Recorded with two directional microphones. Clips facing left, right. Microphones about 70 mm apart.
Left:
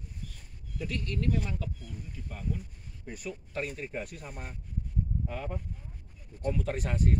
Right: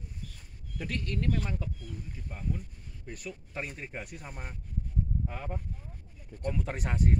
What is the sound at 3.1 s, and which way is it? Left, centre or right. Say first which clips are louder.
Speech: left 2 dB; centre.